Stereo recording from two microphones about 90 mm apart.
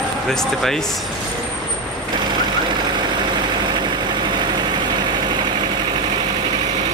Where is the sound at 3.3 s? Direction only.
55° right (ahead or behind).